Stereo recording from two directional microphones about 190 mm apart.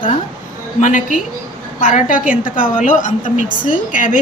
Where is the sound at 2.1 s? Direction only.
5° right (ahead or behind).